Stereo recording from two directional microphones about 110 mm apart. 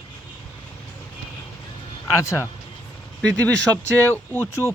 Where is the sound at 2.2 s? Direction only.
30° left (ahead or behind).